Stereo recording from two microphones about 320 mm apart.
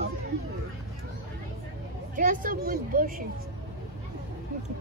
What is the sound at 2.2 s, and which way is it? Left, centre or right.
A child's voice, right.